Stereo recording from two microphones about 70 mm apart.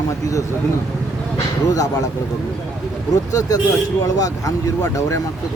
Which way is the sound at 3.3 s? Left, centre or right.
Left.